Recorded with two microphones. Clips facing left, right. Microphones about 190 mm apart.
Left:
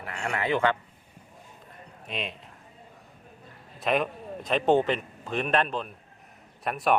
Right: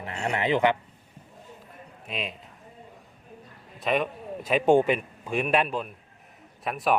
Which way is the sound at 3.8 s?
Centre (ahead or behind).